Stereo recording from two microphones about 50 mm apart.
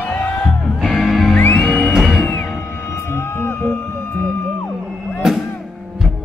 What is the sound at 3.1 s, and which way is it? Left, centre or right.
Music, left.